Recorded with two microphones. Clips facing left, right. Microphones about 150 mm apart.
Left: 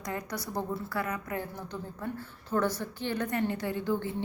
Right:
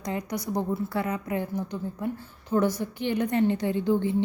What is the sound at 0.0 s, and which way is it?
A woman's voice, 20° right (ahead or behind).